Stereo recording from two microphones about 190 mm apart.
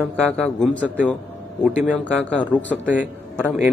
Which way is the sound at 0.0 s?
5° left (ahead or behind).